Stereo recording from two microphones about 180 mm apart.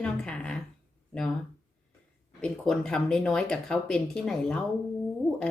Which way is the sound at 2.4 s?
5° left (ahead or behind).